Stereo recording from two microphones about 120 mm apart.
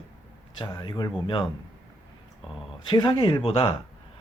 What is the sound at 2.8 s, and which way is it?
Speech, 45° left (ahead or behind).